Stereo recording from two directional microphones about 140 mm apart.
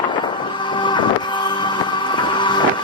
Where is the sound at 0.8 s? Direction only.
35° left (ahead or behind).